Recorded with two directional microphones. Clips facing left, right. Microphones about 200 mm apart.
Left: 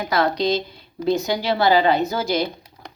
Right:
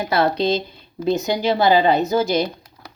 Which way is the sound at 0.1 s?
25° right (ahead or behind).